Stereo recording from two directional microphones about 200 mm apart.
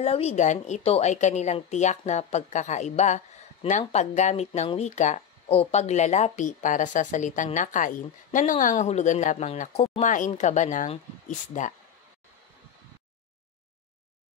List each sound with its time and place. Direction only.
0.0 s speech: 30° left (ahead or behind)